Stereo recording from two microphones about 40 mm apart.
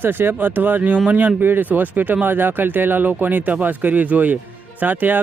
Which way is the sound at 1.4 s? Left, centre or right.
Right.